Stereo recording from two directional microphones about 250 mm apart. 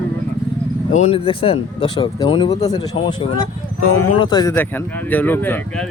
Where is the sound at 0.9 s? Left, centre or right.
Left.